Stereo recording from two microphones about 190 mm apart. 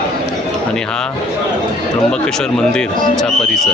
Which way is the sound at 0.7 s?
5° left (ahead or behind).